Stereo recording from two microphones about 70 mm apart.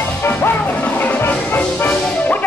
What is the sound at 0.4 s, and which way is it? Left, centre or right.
Music, left.